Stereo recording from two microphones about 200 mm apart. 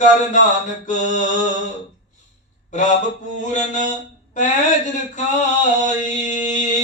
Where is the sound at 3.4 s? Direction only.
40° left (ahead or behind).